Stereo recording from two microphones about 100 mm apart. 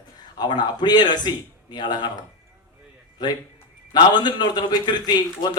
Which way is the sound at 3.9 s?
45° left (ahead or behind).